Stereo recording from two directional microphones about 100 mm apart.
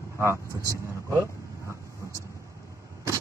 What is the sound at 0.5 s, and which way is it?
Speech, 35° right (ahead or behind).